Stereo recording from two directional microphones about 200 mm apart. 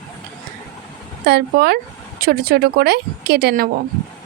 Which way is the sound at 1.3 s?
55° right (ahead or behind).